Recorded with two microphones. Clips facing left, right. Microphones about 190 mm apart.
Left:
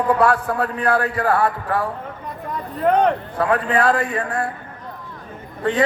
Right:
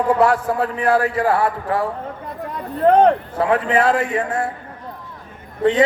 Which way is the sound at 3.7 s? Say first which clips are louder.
Right 1 dB; 25° right (ahead or behind).